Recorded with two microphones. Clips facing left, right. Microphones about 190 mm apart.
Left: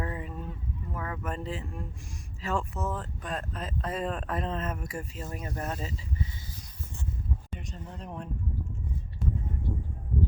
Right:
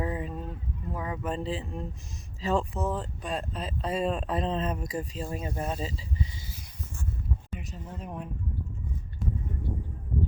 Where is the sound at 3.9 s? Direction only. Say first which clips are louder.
Right 4 dB; 10° right (ahead or behind).